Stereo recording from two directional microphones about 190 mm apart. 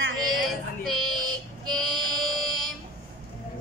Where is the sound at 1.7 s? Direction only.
Centre (ahead or behind).